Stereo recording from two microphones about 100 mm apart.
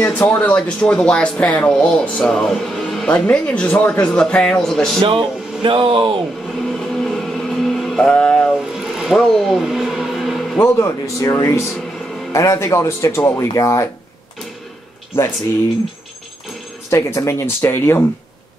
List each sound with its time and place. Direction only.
0.0 s speech: 15° left (ahead or behind)
5.0 s speech: 60° right (ahead or behind)
6.6 s vehicle: 5° left (ahead or behind)
8.1 s speech: 10° left (ahead or behind)
8.7 s a sound: 5° right (ahead or behind)
10.6 s speech: 30° left (ahead or behind)
16.9 s speech: 30° left (ahead or behind)